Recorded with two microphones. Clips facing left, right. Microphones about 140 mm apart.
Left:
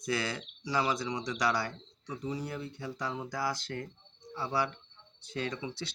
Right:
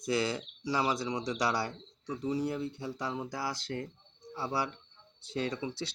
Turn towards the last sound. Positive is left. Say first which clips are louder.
# right 2 dB
turn(degrees=-30)  # may be behind; listen again after turning